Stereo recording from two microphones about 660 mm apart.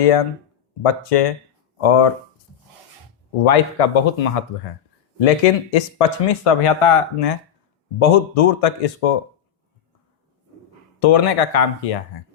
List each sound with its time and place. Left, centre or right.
0.0 s speech: left
3.4 s speech: left
11.0 s speech: left